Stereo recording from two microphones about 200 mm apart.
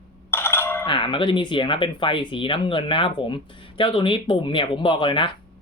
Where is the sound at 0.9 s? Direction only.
25° left (ahead or behind).